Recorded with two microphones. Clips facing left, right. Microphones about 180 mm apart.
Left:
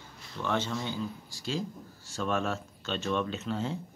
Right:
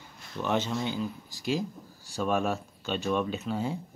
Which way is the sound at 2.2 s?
15° right (ahead or behind).